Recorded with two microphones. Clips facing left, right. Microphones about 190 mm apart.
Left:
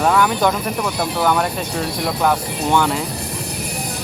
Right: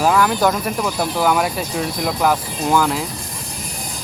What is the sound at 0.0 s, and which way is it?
Speech, 5° right (ahead or behind).